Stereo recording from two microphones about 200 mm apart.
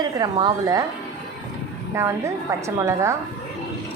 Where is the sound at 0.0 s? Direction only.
20° right (ahead or behind).